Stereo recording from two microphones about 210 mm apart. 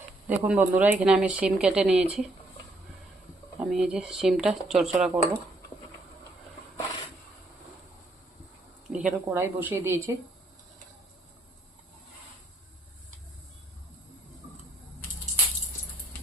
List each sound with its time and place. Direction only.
0.3 s speech: 5° right (ahead or behind)
3.6 s speech: 5° right (ahead or behind)
8.9 s speech: 10° right (ahead or behind)